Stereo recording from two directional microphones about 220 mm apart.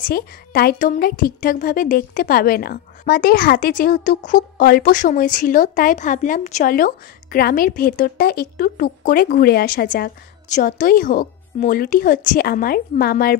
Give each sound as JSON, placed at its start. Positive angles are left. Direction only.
{"t": 0.0, "sound": "a woman's voice", "side_deg": 40}